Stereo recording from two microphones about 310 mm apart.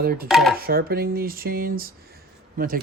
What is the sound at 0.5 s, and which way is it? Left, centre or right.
Speech, right.